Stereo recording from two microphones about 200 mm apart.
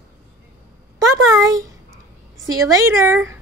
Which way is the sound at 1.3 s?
15° right (ahead or behind).